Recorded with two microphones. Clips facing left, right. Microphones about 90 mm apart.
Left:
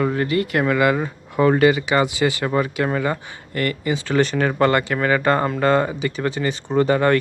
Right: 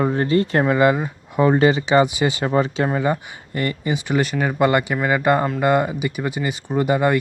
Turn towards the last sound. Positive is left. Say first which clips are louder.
# left 1 dB
turn(degrees=-10)  # may be behind; listen again after turning